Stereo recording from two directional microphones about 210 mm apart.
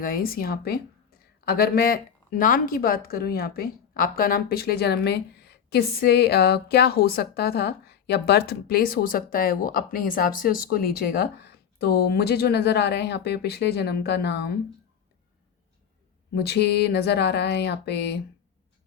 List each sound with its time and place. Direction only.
0.0 s speech: 45° left (ahead or behind)
16.3 s speech: 50° left (ahead or behind)